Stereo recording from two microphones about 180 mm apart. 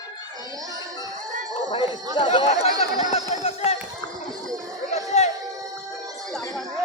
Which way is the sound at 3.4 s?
35° left (ahead or behind).